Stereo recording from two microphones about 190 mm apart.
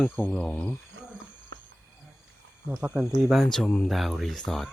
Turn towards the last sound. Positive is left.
turn(degrees=0)  # may be behind; listen again after turning